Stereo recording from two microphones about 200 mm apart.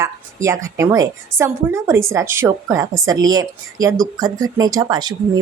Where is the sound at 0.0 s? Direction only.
15° right (ahead or behind).